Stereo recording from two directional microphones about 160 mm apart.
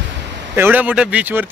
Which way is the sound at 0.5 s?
10° right (ahead or behind).